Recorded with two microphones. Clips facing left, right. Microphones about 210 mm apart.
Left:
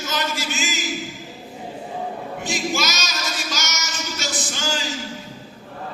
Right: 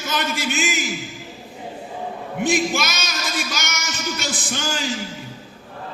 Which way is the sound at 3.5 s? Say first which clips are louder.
Right 1 dB; 55° right (ahead or behind).